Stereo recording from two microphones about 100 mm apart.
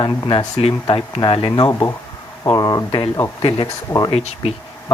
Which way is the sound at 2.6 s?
40° left (ahead or behind).